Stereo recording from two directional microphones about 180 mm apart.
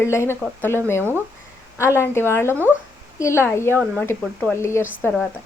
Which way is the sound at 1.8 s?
15° left (ahead or behind).